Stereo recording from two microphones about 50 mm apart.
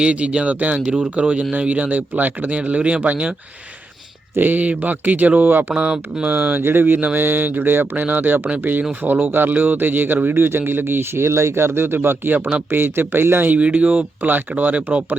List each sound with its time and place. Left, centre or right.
0.0 s speech: right
4.4 s speech: right
5.7 s speech: centre
6.3 s speech: right
6.6 s speech: right
13.5 s speech: right